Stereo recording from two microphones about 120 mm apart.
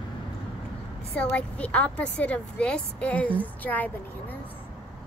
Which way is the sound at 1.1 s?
10° left (ahead or behind).